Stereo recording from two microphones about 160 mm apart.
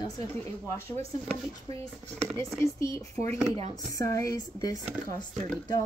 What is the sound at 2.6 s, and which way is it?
Speech, 20° left (ahead or behind).